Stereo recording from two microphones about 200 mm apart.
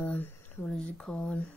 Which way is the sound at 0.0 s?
10° left (ahead or behind).